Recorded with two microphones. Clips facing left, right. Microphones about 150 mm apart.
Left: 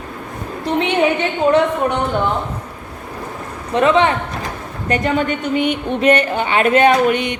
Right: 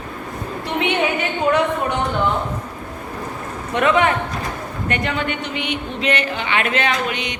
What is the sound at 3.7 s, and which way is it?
Speech, 30° left (ahead or behind).